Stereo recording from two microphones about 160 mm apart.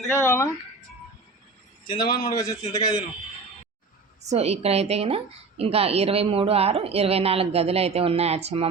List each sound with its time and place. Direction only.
0.1 s speech: 15° left (ahead or behind)
1.9 s a man's voice: 25° left (ahead or behind)
4.2 s a woman's voice: 45° right (ahead or behind)